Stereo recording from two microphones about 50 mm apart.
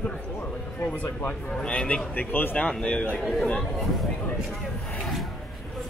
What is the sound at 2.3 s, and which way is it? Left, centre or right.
Speech, left.